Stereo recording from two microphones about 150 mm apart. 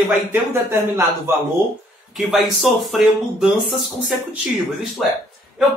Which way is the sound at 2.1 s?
Centre (ahead or behind).